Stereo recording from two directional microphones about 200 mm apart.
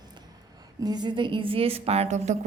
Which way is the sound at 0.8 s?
20° right (ahead or behind).